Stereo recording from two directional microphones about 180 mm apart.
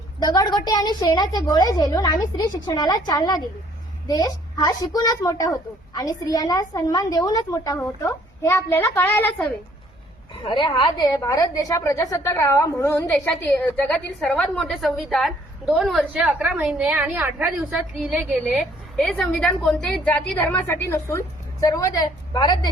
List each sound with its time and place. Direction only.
0.2 s a woman's voice: 20° left (ahead or behind)
10.4 s a woman's voice: 25° left (ahead or behind); by 17.4 s 10° right (ahead or behind)
18.0 s a woman's voice: centre (ahead or behind); by 22.7 s 25° left (ahead or behind)